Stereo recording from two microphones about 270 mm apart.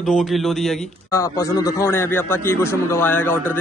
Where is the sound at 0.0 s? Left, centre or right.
Centre.